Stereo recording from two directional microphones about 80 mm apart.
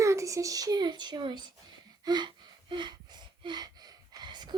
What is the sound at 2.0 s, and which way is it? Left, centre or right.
Gasp, right.